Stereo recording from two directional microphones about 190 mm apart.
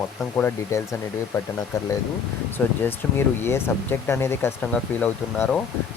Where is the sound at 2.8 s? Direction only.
10° left (ahead or behind).